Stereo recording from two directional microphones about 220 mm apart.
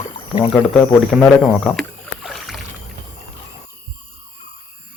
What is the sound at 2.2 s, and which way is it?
Rowboat, centre (ahead or behind).